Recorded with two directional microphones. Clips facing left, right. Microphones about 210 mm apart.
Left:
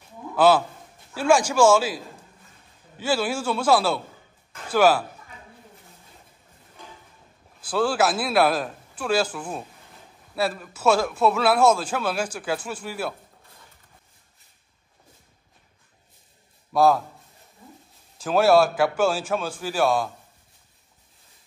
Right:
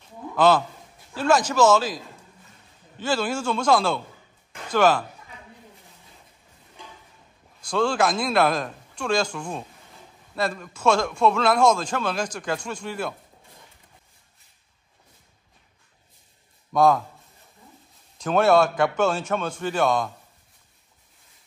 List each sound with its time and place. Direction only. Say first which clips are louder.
0.4 s a man's voice: left 1 dB; 10° left (ahead or behind)
3.0 s a man's voice: left 1 dB; 10° left (ahead or behind)
7.6 s a man's voice: even; 5° left (ahead or behind)
16.7 s a man's voice: even; 5° left (ahead or behind)
18.1 s a man's voice: left 1 dB; 5° left (ahead or behind)